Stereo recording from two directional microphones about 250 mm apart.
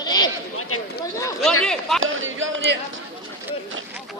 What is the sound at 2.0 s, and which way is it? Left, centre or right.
Speech, right.